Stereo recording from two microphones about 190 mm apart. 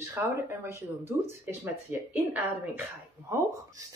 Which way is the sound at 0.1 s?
10° right (ahead or behind).